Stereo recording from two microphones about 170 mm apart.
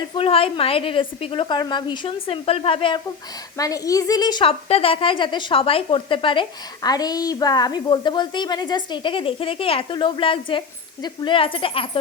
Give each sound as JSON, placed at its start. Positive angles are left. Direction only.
{"t": 0.2, "sound": "a woman's voice", "side_deg": 35}
{"t": 3.6, "sound": "a woman's voice", "side_deg": 20}